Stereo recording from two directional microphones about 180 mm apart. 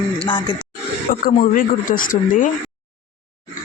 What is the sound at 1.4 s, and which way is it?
Speech, 50° left (ahead or behind).